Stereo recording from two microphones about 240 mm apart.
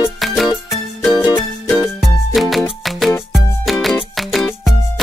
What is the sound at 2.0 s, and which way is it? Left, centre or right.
Music, centre.